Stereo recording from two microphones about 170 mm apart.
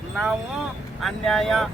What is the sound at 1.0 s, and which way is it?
Speech, centre (ahead or behind).